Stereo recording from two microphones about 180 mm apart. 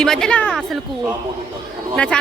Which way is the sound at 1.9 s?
5° left (ahead or behind).